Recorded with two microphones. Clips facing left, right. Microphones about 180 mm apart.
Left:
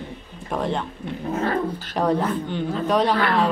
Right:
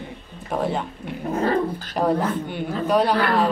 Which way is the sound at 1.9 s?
5° right (ahead or behind).